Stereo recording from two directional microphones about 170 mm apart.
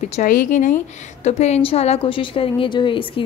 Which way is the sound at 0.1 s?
50° left (ahead or behind).